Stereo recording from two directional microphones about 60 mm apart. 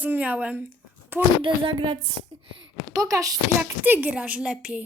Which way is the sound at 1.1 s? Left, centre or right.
Right.